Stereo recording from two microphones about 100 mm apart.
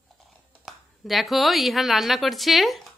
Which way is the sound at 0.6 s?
Centre (ahead or behind).